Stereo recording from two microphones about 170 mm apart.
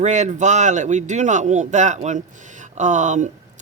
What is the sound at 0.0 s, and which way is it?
A man's voice, 45° right (ahead or behind).